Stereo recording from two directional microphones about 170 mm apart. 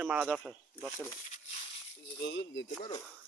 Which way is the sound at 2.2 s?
90° left.